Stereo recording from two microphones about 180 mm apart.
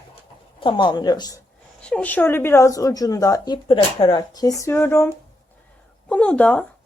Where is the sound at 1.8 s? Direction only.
5° left (ahead or behind).